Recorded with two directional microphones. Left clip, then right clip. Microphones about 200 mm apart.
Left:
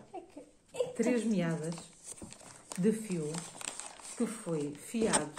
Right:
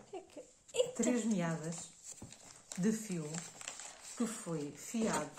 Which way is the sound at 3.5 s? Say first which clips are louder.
Left 4 dB; 35° left (ahead or behind).